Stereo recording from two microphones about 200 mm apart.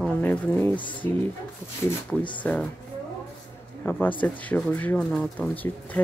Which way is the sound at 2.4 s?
5° left (ahead or behind).